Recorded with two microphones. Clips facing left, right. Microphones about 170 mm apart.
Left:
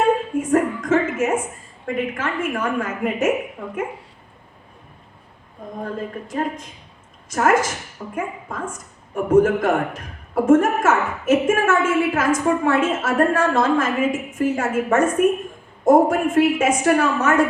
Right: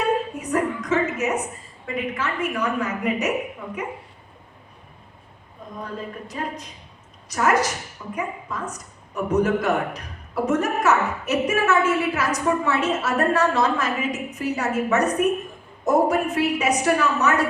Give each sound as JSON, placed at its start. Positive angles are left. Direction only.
{"t": 0.0, "sound": "a woman's voice", "side_deg": 50}
{"t": 5.8, "sound": "a woman's voice", "side_deg": 50}